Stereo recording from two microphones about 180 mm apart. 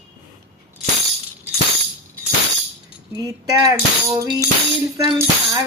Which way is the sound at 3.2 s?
20° right (ahead or behind).